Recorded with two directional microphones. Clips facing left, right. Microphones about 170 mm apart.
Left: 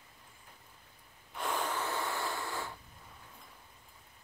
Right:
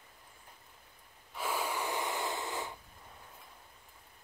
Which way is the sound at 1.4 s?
5° right (ahead or behind).